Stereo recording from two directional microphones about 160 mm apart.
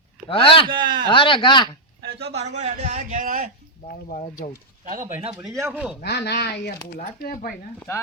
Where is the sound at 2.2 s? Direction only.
40° right (ahead or behind); by 3.5 s 60° right (ahead or behind).